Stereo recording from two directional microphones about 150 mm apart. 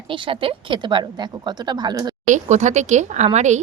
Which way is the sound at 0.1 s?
35° right (ahead or behind).